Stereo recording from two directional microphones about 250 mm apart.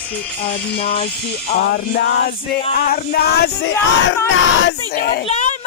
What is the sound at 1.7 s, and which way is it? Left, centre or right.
Music, left.